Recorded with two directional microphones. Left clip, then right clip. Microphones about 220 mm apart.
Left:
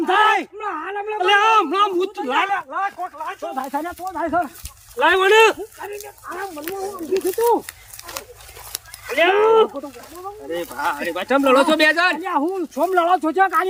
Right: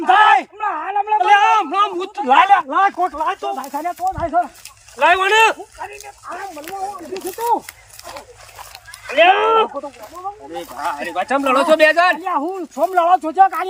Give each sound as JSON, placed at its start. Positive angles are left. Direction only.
{"t": 0.0, "sound": "a sound", "side_deg": -5}
{"t": 1.3, "sound": "a sound", "side_deg": 5}
{"t": 2.1, "sound": "speech", "side_deg": -20}
{"t": 3.6, "sound": "speech", "side_deg": 10}
{"t": 4.9, "sound": "speech", "side_deg": 0}
{"t": 9.0, "sound": "speech", "side_deg": -5}
{"t": 10.5, "sound": "speech", "side_deg": 10}